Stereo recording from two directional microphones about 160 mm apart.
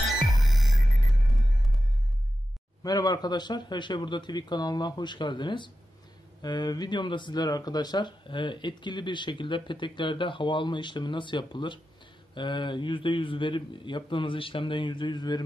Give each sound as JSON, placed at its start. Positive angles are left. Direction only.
{"t": 0.1, "sound": "music", "side_deg": 0}
{"t": 2.8, "sound": "a man's voice", "side_deg": 25}